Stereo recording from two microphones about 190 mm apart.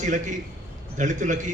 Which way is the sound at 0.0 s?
40° right (ahead or behind).